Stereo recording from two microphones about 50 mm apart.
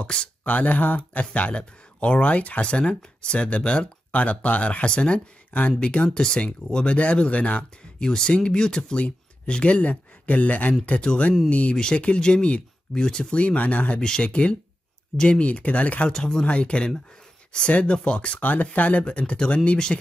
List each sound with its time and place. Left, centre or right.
0.0 s speech: centre
0.5 s speech: left
8.0 s speech: centre
11.7 s speech: centre
14.0 s speech: centre
14.3 s speech: left
16.1 s speech: centre